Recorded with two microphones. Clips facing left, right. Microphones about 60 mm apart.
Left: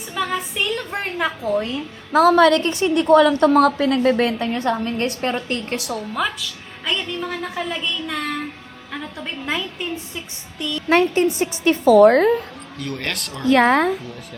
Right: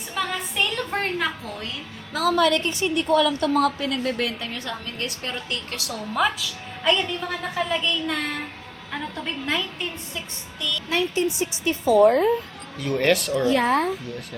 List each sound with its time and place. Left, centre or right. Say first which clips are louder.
0.1 s a sound: left 4 dB; centre
1.2 s a woman's voice: left 7 dB; left
2.1 s a woman's voice: left 7 dB; left
5.9 s a woman's voice: right 2 dB; centre
10.6 s a woman's voice: left 3 dB; left
10.8 s a woman's voice: left 8 dB; left
12.8 s a woman's voice: right 7 dB; centre
13.5 s a woman's voice: left 7 dB; left